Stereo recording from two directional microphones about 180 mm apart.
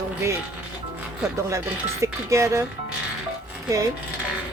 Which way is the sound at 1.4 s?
15° right (ahead or behind).